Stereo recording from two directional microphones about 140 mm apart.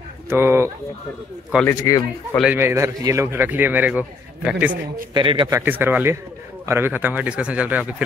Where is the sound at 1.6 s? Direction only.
25° left (ahead or behind).